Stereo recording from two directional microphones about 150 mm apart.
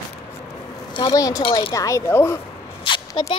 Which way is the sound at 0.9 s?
30° left (ahead or behind).